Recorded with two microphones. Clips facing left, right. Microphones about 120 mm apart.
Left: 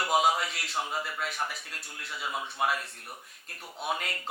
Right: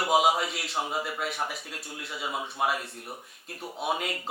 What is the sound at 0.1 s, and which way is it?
Speech, 5° right (ahead or behind).